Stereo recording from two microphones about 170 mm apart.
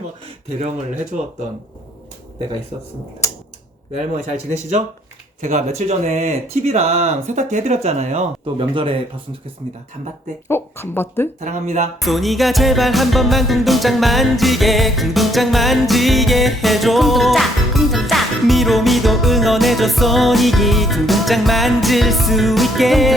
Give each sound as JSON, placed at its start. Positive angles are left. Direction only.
{"t": 0.4, "sound": "speech", "side_deg": -40}
{"t": 3.9, "sound": "speech", "side_deg": -45}
{"t": 10.5, "sound": "speech", "side_deg": 15}
{"t": 11.3, "sound": "speech", "side_deg": -45}
{"t": 12.0, "sound": "music", "side_deg": 0}